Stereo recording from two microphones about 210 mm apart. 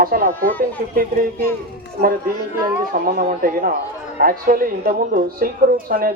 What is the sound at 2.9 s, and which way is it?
A man's voice, 40° right (ahead or behind).